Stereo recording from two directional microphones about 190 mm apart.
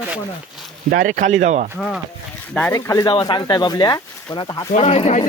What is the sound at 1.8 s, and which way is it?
Speech, centre (ahead or behind).